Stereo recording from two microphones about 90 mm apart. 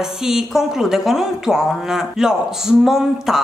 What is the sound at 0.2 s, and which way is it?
A woman's voice, 5° right (ahead or behind).